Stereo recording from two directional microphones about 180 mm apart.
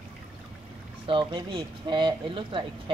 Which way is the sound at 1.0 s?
30° right (ahead or behind).